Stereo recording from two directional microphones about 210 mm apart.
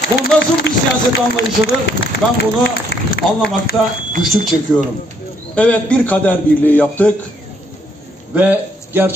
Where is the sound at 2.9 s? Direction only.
50° left (ahead or behind).